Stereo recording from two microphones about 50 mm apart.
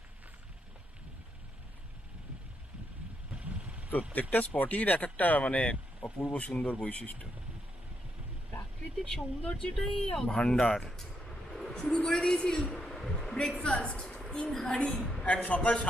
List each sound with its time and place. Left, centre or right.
3.3 s vehicle: right
4.1 s speech: left
9.0 s speech: centre
10.3 s speech: centre
10.8 s vehicle: centre
11.7 s speech: centre
12.7 s a sound: centre
13.6 s a woman's voice: left
15.2 s speech: left